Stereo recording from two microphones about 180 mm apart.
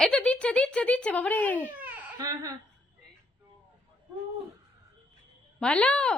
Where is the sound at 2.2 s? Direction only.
20° right (ahead or behind).